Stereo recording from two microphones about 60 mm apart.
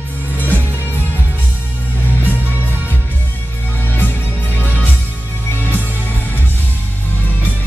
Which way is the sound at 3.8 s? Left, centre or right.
Left.